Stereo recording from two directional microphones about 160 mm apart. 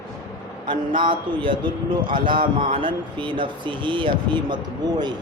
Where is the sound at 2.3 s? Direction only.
60° right (ahead or behind).